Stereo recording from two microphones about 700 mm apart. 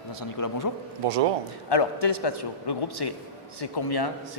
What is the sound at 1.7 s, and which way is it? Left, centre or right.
A man's voice, left.